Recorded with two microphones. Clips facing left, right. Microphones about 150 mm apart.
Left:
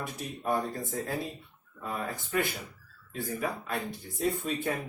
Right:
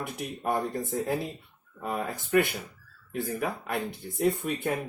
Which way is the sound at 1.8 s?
65° right (ahead or behind).